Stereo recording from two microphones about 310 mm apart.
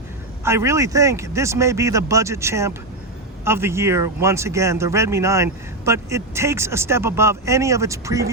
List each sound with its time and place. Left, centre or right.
0.4 s speech: centre